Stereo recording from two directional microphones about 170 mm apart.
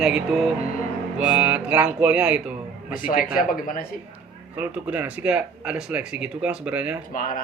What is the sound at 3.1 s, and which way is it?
Speech, 55° left (ahead or behind).